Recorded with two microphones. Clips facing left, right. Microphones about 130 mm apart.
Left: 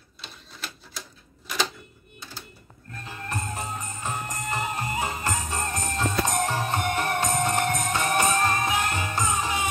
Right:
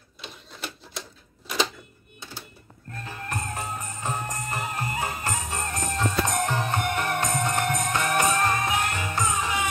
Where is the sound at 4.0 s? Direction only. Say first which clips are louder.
Right 2 dB; 15° right (ahead or behind).